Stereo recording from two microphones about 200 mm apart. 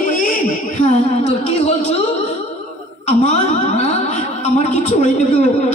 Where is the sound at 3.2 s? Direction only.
40° left (ahead or behind).